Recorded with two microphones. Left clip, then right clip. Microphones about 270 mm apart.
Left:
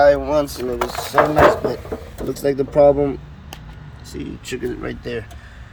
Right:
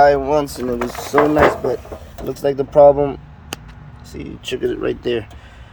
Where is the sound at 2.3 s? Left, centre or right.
Right.